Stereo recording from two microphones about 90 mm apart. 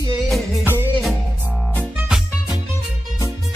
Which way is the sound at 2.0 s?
5° right (ahead or behind).